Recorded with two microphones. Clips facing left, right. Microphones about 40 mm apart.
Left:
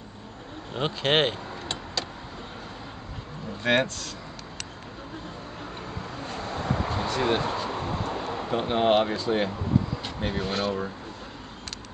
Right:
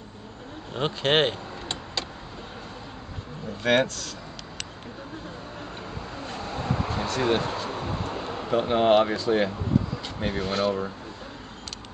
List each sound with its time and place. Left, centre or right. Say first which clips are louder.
0.7 s speech: right 1 dB; centre
3.7 s speech: right 2 dB; left
6.8 s vehicle: right 1 dB; centre
8.3 s speech: right 5 dB; centre